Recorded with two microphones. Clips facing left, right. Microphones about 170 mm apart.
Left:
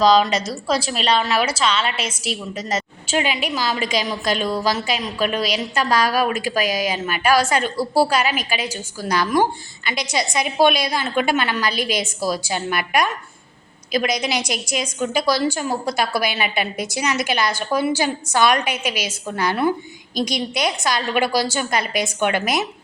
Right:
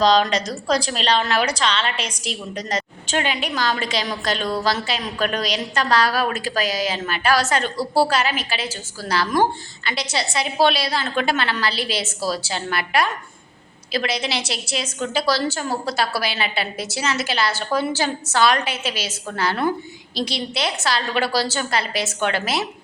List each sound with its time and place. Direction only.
0.0 s a woman's voice: 5° left (ahead or behind)
2.6 s a woman's voice: 35° right (ahead or behind)
3.1 s a woman's voice: 10° left (ahead or behind)